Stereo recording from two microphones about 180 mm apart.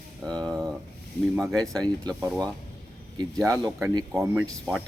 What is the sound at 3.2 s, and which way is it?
Speech, 20° right (ahead or behind).